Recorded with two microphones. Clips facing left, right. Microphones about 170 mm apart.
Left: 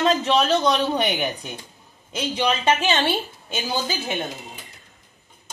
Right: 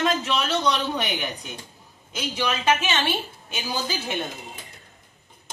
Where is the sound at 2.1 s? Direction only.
25° left (ahead or behind).